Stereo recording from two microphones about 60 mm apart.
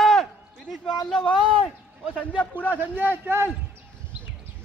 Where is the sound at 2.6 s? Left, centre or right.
Right.